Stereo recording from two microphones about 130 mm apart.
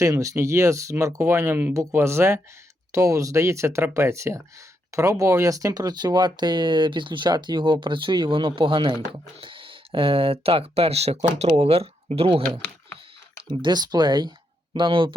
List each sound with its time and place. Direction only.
0.0 s speech: 25° right (ahead or behind); by 12.4 s 50° right (ahead or behind)
13.6 s speech: 35° right (ahead or behind)